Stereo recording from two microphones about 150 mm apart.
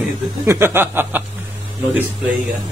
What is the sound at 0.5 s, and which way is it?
Speech, 15° right (ahead or behind).